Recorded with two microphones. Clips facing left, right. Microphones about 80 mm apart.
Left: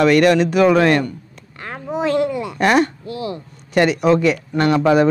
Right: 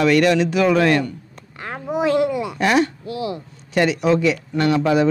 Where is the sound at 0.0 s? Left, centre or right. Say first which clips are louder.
Left 3 dB; left.